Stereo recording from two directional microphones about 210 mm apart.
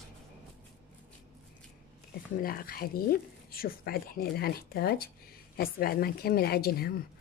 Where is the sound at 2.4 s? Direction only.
45° left (ahead or behind).